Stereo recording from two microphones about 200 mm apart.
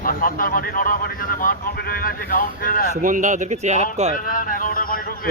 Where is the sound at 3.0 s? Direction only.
40° right (ahead or behind).